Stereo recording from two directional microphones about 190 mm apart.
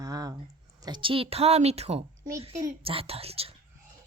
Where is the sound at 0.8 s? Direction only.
25° right (ahead or behind).